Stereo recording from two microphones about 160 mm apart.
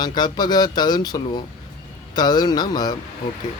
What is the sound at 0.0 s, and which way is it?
Speech, 25° left (ahead or behind).